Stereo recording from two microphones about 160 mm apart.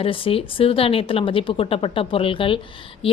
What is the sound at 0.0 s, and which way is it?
A woman's voice, 35° left (ahead or behind).